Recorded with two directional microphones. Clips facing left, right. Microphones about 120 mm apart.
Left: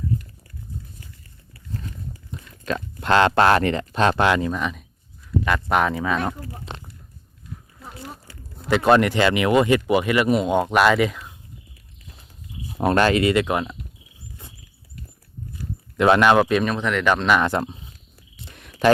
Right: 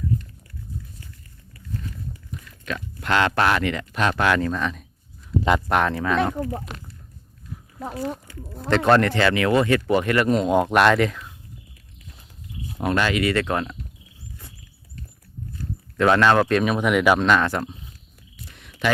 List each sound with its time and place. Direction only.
2.3 s speech: 30° left (ahead or behind)
4.4 s speech: 15° left (ahead or behind)
5.4 s speech: 20° right (ahead or behind)
5.6 s speech: centre (ahead or behind)
6.7 s a sound: 25° left (ahead or behind)
8.3 s speech: 35° left (ahead or behind)
8.7 s speech: 10° left (ahead or behind)
12.8 s speech: 40° left (ahead or behind)
13.2 s speech: 15° left (ahead or behind)
15.5 s a sound: 15° left (ahead or behind)
16.6 s speech: 5° right (ahead or behind)
17.2 s speech: 10° left (ahead or behind)
17.5 s speech: 25° left (ahead or behind)
18.5 s a sound: 45° left (ahead or behind)